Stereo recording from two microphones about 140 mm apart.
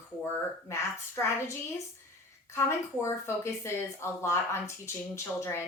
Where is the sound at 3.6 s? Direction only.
20° left (ahead or behind).